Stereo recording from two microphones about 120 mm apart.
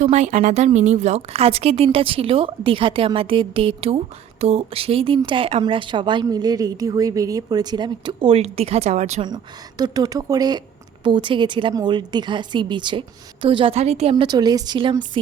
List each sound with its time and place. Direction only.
0.0 s a woman's voice: 75° right (ahead or behind)
9.2 s a woman's voice: 35° right (ahead or behind)
11.0 s a woman's voice: 45° right (ahead or behind)
14.3 s a woman's voice: 35° right (ahead or behind)